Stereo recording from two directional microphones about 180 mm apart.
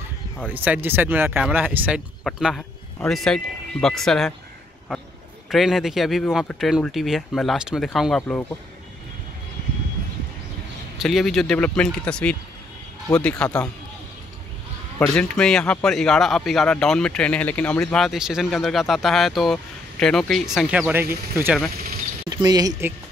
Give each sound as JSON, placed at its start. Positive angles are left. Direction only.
{"t": 0.5, "sound": "speech", "side_deg": -10}
{"t": 2.2, "sound": "speech", "side_deg": 0}
{"t": 5.5, "sound": "a man's voice", "side_deg": 0}
{"t": 11.0, "sound": "a man's voice", "side_deg": 0}
{"t": 13.4, "sound": "a man's voice", "side_deg": 5}
{"t": 15.0, "sound": "a man's voice", "side_deg": 5}